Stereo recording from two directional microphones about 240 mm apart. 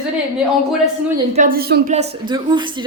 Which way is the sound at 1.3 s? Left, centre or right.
Right.